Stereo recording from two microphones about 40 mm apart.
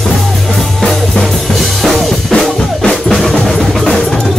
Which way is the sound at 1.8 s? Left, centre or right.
Centre.